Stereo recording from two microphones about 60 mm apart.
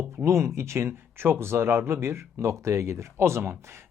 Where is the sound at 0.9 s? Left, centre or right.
Right.